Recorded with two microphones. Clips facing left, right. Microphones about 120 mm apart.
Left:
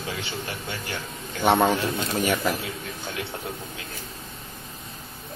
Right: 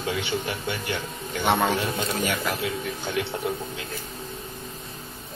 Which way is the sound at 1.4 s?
25° left (ahead or behind).